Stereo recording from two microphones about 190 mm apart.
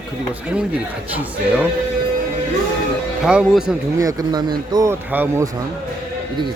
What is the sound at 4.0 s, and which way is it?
A man's voice, 20° right (ahead or behind).